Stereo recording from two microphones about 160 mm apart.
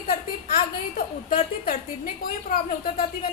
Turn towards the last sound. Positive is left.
turn(degrees=65)  # may be behind; listen again after turning